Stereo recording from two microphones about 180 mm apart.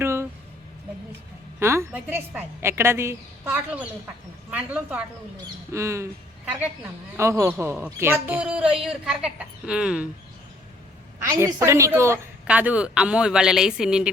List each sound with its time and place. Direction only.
0.0 s a sound: 15° right (ahead or behind)
1.5 s a woman's voice: 15° right (ahead or behind)
7.2 s a woman's voice: 15° right (ahead or behind)
11.2 s a woman's voice: 15° right (ahead or behind)